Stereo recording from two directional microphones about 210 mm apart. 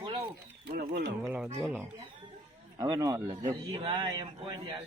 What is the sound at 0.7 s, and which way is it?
Speech, 45° right (ahead or behind).